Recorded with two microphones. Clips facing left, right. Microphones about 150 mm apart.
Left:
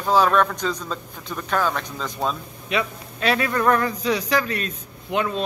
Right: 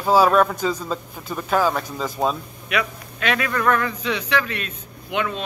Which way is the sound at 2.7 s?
30° left (ahead or behind).